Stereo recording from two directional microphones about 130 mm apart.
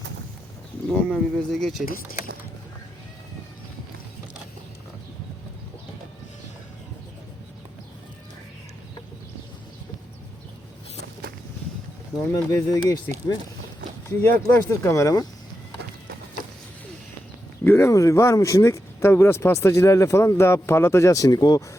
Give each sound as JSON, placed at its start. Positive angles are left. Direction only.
{"t": 0.9, "sound": "speech", "side_deg": 5}
{"t": 12.2, "sound": "speech", "side_deg": 20}
{"t": 14.1, "sound": "speech", "side_deg": 20}
{"t": 17.6, "sound": "speech", "side_deg": 15}